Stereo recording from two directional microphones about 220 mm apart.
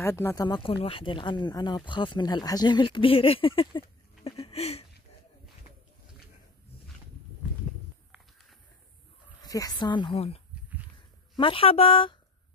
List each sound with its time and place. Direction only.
0.0 s speech: 10° left (ahead or behind)
4.2 s a sound: 25° left (ahead or behind)
9.4 s speech: 15° left (ahead or behind)